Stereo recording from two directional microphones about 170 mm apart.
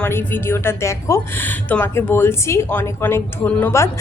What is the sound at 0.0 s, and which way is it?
A woman's voice, 10° left (ahead or behind).